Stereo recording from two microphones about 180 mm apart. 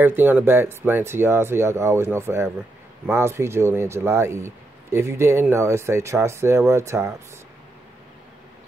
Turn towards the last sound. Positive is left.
turn(degrees=-15)  # may be behind; listen again after turning